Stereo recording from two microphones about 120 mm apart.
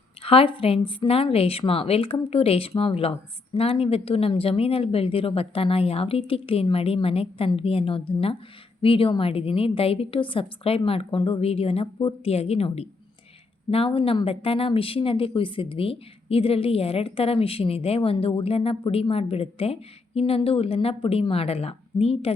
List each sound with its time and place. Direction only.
0.2 s a woman's voice: 50° left (ahead or behind)